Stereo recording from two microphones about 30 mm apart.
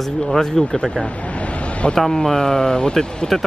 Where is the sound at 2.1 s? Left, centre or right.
Left.